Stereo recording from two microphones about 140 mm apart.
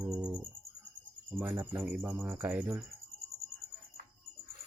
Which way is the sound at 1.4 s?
15° right (ahead or behind).